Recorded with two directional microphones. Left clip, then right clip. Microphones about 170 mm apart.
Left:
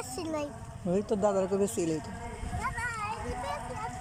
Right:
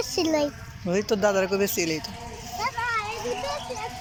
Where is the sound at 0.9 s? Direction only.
15° left (ahead or behind).